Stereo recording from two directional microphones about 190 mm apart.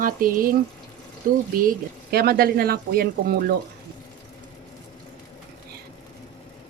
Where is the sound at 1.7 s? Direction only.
55° right (ahead or behind).